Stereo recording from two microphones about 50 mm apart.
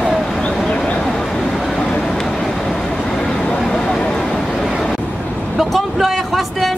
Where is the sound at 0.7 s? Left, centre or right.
Left.